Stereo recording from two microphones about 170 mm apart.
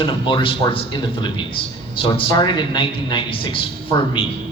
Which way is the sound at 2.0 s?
30° left (ahead or behind).